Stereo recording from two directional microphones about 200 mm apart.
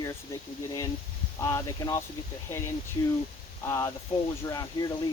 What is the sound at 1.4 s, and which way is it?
Speech, 15° left (ahead or behind).